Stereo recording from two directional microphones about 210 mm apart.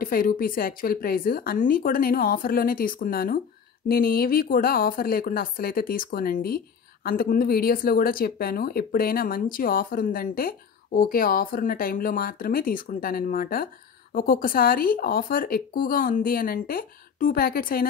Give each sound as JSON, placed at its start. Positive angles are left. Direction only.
{"t": 0.0, "sound": "speech", "side_deg": 45}